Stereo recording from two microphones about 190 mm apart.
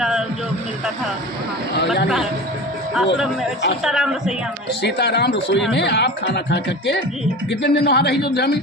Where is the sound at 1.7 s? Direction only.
65° left (ahead or behind).